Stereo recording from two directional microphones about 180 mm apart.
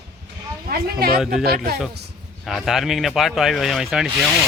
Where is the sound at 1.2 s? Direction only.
Centre (ahead or behind).